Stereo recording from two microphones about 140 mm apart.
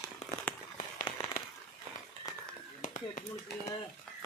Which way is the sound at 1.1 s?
35° left (ahead or behind).